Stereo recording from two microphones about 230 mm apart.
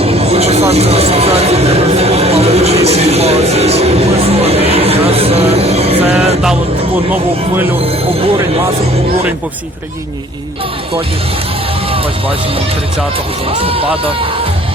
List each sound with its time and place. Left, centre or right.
0.0 s speech: right
7.1 s speech: centre
13.6 s speech: right